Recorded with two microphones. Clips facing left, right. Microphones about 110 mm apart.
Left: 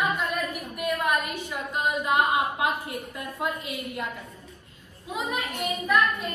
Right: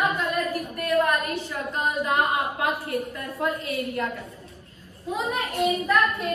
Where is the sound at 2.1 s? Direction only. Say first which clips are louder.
Left 3 dB; 20° left (ahead or behind).